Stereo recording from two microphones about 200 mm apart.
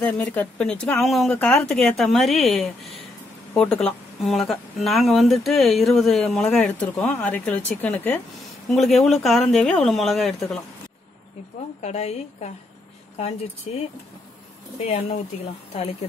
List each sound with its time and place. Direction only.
0.0 s speech: 10° left (ahead or behind)
11.8 s a woman's voice: 35° left (ahead or behind)
13.7 s a woman's voice: 30° left (ahead or behind)
14.9 s a woman's voice: 35° left (ahead or behind)